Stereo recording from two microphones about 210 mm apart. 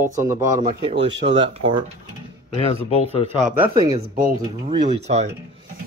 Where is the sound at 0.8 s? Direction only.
25° right (ahead or behind).